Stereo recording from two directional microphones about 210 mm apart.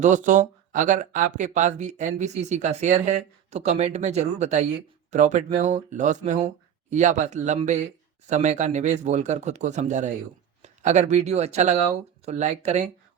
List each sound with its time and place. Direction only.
0.0 s speech: 35° right (ahead or behind)